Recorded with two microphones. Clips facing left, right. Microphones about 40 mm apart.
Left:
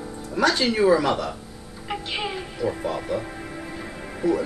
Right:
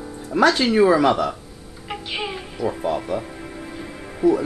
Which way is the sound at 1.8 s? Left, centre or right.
Centre.